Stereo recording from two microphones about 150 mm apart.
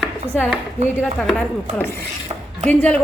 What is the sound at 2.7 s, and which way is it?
Speech, 10° left (ahead or behind).